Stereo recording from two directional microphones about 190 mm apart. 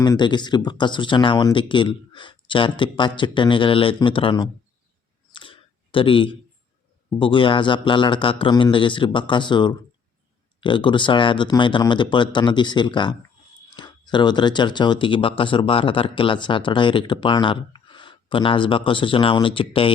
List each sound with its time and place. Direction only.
0.0 s speech: 25° left (ahead or behind)
5.3 s a sound: 25° left (ahead or behind)
7.2 s speech: 25° left (ahead or behind)